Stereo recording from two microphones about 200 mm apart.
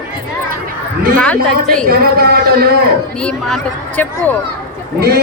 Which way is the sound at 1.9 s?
50° right (ahead or behind).